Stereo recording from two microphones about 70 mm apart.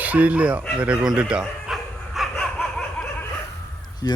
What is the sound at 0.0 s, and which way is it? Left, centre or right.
Speech, right.